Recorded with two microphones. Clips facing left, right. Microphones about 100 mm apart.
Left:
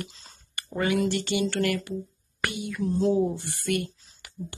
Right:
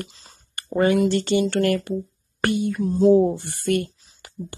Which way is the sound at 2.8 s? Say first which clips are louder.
Right 6 dB; 20° right (ahead or behind).